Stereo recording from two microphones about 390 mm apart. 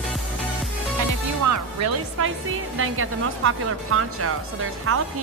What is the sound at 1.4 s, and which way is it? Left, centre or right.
Music, right.